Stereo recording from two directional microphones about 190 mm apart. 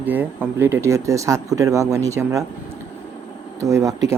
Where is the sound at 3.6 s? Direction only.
15° right (ahead or behind).